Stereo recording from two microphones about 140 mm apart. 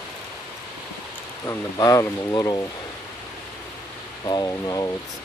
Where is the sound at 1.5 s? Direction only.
25° left (ahead or behind).